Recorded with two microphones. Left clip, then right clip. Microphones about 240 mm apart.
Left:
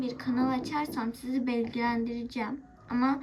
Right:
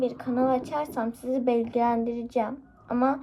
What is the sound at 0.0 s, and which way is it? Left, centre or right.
A woman's voice, right.